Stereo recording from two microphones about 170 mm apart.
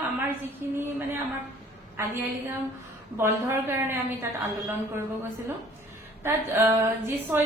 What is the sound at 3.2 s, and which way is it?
A woman's voice, 15° right (ahead or behind).